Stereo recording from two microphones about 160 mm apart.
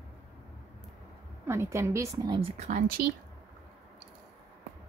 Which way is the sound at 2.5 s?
55° right (ahead or behind).